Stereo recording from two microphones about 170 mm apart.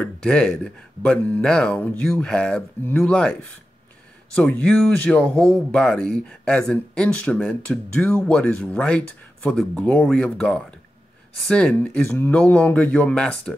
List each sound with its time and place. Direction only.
0.0 s speech: 5° left (ahead or behind)
4.4 s speech: 5° left (ahead or behind)